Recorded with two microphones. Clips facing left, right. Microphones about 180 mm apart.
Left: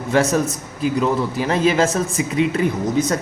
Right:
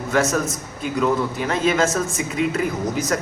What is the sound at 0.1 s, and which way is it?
A man's voice, 30° left (ahead or behind).